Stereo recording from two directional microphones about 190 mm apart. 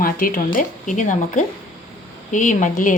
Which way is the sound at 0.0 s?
50° left (ahead or behind).